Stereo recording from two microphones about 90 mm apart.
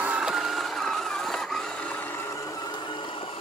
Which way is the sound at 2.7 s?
60° left (ahead or behind).